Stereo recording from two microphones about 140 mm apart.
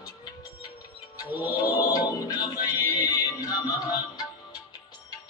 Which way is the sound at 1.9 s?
25° left (ahead or behind).